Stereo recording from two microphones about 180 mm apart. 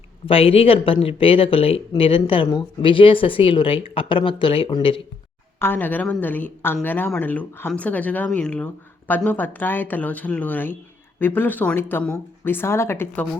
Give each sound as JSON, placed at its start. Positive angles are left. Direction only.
{"t": 0.3, "sound": "speech", "side_deg": 30}
{"t": 5.5, "sound": "speech", "side_deg": 10}